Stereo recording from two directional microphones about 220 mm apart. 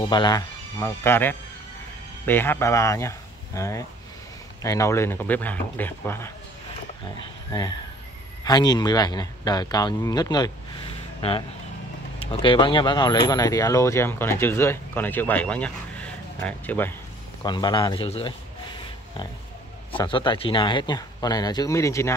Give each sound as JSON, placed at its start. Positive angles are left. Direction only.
{"t": 0.0, "sound": "speech", "side_deg": 20}
{"t": 17.4, "sound": "speech", "side_deg": 20}
{"t": 19.9, "sound": "speech", "side_deg": 25}